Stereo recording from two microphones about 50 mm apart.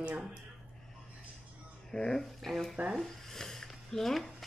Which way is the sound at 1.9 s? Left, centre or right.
Centre.